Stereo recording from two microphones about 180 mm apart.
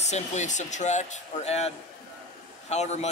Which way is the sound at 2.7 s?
40° left (ahead or behind).